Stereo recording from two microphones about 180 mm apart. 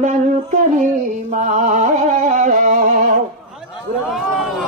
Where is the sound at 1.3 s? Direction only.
45° right (ahead or behind).